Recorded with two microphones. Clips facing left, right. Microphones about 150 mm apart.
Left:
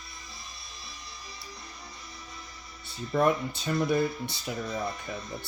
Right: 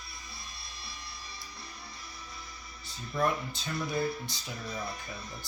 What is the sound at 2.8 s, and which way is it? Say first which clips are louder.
Speech: left 5 dB; 60° left (ahead or behind).